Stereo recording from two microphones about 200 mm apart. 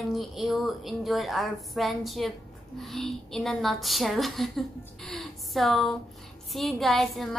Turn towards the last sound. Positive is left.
turn(degrees=0)  # may be behind; listen again after turning